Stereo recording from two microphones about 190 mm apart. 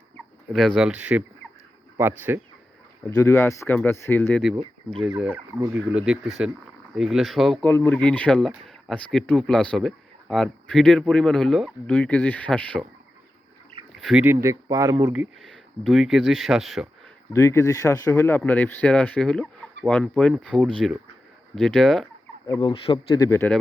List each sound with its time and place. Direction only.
0.5 s speech: centre (ahead or behind)
3.1 s speech: 15° left (ahead or behind)
5.1 s speech: 10° right (ahead or behind); by 12.8 s 5° left (ahead or behind)
13.9 s speech: centre (ahead or behind); by 15.1 s 15° right (ahead or behind)
15.1 s speech: 5° right (ahead or behind)
17.3 s speech: 15° left (ahead or behind)
22.4 s speech: 25° left (ahead or behind)